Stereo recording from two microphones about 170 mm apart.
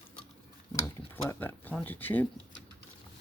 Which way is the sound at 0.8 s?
15° left (ahead or behind).